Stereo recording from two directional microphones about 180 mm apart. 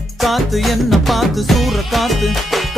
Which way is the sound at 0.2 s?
Centre (ahead or behind).